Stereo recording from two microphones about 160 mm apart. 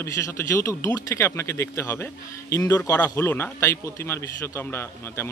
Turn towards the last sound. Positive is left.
turn(degrees=15)  # may be behind; listen again after turning